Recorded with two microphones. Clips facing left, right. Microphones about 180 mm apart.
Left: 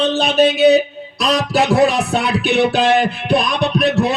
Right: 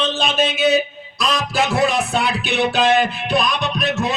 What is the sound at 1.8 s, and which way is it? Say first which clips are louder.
Speech: left 2 dB; 65° left (ahead or behind).